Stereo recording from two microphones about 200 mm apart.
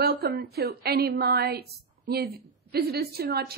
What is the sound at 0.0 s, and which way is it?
A woman's voice, 50° right (ahead or behind).